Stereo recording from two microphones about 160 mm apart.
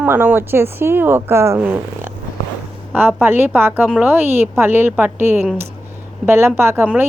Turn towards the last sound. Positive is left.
turn(degrees=-15)  # may be behind; listen again after turning